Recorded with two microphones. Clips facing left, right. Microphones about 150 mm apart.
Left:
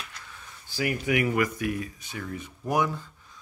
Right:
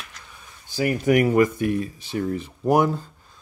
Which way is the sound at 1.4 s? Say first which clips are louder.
Right 7 dB; 30° right (ahead or behind).